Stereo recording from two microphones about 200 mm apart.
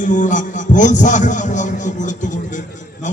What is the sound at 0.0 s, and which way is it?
A man's voice, 40° left (ahead or behind).